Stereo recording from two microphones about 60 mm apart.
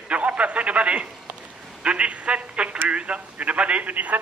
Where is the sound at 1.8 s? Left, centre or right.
Centre.